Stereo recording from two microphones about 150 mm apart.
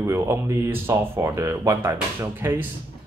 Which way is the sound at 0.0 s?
15° right (ahead or behind).